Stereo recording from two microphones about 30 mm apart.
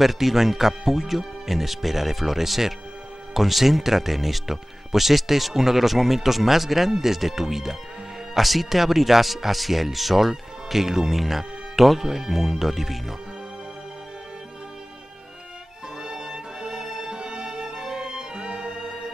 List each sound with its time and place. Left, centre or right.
0.0 s speech: centre
16.0 s music: right
17.1 s music: right
18.8 s music: right